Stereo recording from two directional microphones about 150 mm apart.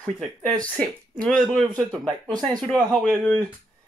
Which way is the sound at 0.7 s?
5° left (ahead or behind).